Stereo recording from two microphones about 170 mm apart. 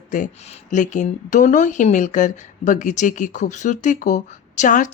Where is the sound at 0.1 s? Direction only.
45° left (ahead or behind).